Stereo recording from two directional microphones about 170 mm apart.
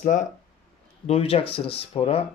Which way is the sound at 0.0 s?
50° left (ahead or behind).